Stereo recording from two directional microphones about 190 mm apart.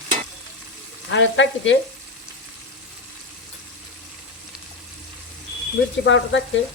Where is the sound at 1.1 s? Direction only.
75° left (ahead or behind).